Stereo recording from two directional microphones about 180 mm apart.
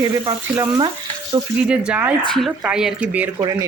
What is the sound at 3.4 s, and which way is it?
Frying, 20° right (ahead or behind).